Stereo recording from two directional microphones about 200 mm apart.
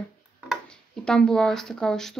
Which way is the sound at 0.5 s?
5° left (ahead or behind).